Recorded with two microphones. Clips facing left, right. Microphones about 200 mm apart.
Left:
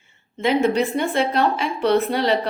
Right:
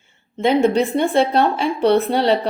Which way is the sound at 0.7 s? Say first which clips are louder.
Right 3 dB; 30° right (ahead or behind).